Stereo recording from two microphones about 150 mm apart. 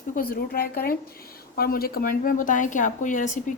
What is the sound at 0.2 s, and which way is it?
A woman's voice, 80° left.